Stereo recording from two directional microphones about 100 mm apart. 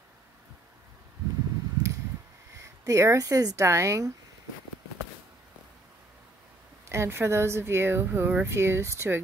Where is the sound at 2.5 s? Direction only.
30° right (ahead or behind).